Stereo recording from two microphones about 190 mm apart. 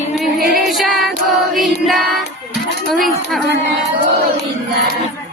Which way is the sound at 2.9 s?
Centre (ahead or behind).